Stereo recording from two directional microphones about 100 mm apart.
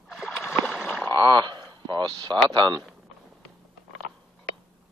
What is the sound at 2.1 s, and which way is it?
Speech, 50° right (ahead or behind).